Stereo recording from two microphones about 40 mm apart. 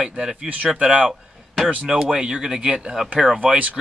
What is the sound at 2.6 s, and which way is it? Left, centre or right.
Speech, right.